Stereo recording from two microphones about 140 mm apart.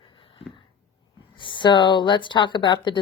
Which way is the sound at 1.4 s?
35° left (ahead or behind).